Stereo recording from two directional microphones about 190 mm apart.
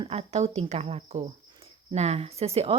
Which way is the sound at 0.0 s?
30° right (ahead or behind).